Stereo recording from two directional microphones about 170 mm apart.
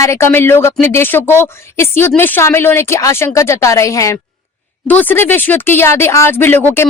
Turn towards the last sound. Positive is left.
turn(degrees=10)  # may be behind; listen again after turning